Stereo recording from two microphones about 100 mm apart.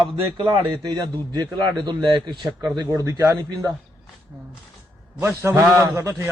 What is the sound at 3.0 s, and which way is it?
Speech, 30° right (ahead or behind).